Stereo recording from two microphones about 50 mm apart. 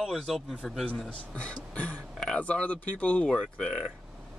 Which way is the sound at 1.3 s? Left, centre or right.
Left.